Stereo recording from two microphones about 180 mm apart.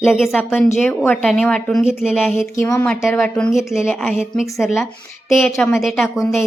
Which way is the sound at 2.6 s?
15° left (ahead or behind).